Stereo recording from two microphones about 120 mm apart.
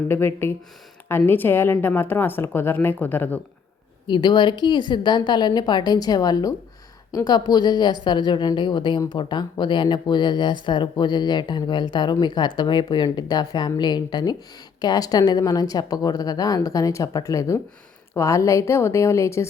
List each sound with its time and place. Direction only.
0.1 s a woman's voice: 20° left (ahead or behind)
4.0 s a woman's voice: 40° left (ahead or behind); by 19.5 s 25° left (ahead or behind)